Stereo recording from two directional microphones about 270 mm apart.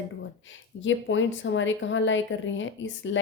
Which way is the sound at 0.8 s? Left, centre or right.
Left.